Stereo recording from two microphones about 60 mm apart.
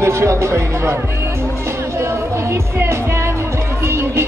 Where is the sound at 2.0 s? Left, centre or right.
Right.